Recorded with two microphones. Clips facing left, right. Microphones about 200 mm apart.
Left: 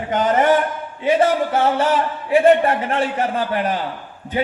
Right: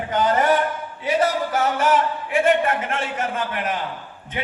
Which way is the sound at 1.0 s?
30° left (ahead or behind).